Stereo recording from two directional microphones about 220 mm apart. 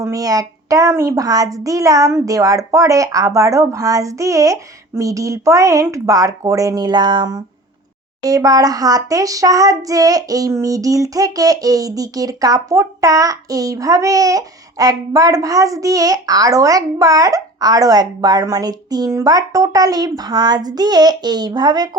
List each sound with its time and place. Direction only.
0.0 s child singing: 15° right (ahead or behind)